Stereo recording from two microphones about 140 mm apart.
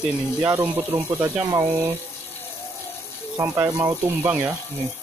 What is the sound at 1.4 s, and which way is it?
Speech, 25° right (ahead or behind).